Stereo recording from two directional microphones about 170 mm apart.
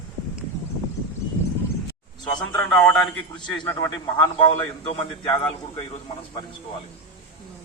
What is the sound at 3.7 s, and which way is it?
A man's voice, 20° left (ahead or behind).